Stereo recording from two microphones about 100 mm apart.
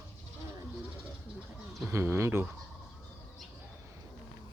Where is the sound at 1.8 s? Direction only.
25° right (ahead or behind).